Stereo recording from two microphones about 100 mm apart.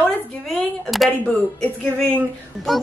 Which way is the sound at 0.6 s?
Centre (ahead or behind).